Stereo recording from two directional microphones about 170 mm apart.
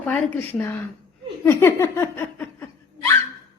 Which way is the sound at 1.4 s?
15° left (ahead or behind).